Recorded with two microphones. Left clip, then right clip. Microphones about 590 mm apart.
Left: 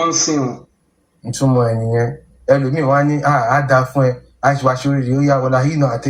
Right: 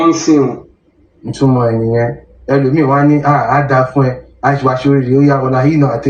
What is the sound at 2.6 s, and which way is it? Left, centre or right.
Speech, left.